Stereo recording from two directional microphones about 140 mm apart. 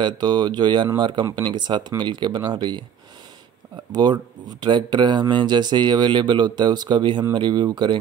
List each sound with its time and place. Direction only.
0.0 s speech: 30° right (ahead or behind)
3.9 s speech: 30° right (ahead or behind)